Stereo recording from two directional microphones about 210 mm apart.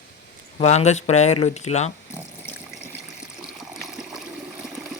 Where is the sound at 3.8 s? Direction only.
Centre (ahead or behind).